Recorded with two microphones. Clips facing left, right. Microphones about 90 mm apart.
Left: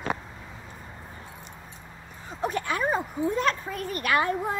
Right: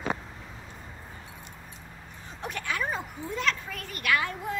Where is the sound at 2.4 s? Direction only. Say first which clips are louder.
Left 5 dB; 35° left (ahead or behind).